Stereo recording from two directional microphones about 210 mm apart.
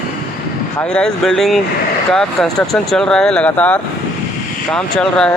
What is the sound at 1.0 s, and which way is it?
Speech, 5° left (ahead or behind).